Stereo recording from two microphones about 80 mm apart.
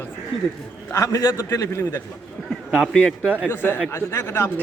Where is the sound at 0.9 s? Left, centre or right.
Left.